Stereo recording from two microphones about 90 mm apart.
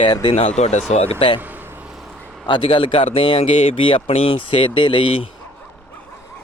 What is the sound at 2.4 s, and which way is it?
Speech, 65° left (ahead or behind).